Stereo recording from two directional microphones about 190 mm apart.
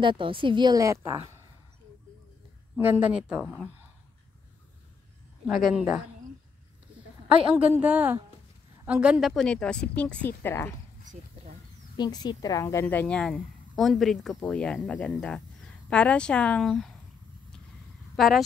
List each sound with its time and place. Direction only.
0.0 s a woman's voice: 25° right (ahead or behind)
2.7 s a woman's voice: 10° right (ahead or behind)
5.5 s a woman's voice: centre (ahead or behind)
7.5 s a woman's voice: 10° right (ahead or behind); by 10.7 s 10° left (ahead or behind)
12.0 s a woman's voice: 20° left (ahead or behind); by 16.9 s centre (ahead or behind)
18.1 s speech: centre (ahead or behind)